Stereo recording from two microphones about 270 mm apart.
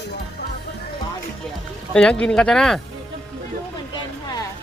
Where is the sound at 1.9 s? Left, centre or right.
Centre.